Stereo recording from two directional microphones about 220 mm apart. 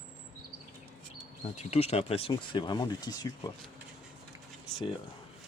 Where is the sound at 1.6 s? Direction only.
30° left (ahead or behind).